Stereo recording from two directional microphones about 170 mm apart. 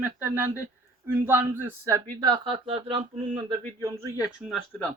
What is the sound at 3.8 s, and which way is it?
Speech, 15° right (ahead or behind).